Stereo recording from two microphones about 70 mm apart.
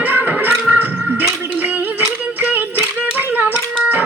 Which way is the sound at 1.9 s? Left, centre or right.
Right.